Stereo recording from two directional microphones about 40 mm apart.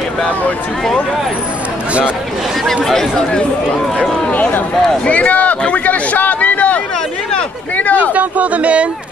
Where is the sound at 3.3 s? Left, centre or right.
Left.